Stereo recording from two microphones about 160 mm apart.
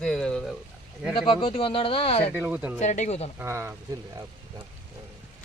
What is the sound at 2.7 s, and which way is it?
Speech, 50° left (ahead or behind).